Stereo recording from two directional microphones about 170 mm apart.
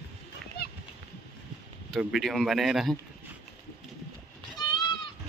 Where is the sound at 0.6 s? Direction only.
75° left (ahead or behind).